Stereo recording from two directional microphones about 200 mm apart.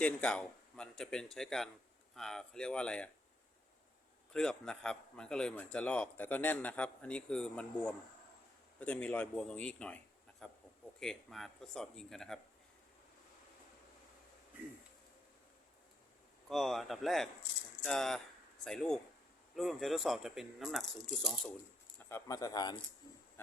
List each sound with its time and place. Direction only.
0.0 s speech: 5° left (ahead or behind)
4.3 s speech: 5° left (ahead or behind)
16.5 s speech: centre (ahead or behind)
21.9 s speech: 15° left (ahead or behind)